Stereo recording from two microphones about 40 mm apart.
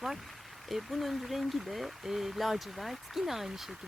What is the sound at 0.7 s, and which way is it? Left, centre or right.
Speech, centre.